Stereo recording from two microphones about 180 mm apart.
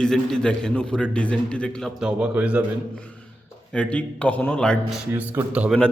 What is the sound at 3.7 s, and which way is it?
Speech, 5° left (ahead or behind).